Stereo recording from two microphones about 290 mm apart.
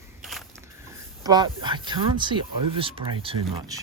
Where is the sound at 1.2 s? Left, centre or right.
Centre.